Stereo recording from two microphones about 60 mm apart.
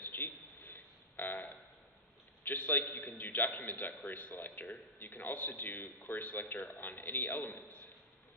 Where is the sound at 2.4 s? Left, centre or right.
Left.